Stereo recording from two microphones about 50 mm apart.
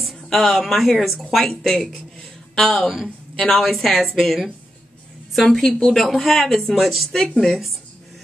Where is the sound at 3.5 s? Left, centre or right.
Centre.